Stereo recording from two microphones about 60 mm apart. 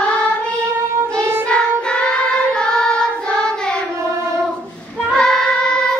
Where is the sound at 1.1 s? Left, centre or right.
Right.